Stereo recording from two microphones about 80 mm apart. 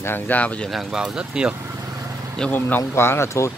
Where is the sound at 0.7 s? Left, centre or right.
Centre.